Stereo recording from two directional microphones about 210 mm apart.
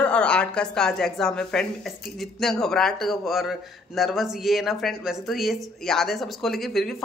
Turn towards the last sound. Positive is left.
turn(degrees=0)  # may be behind; listen again after turning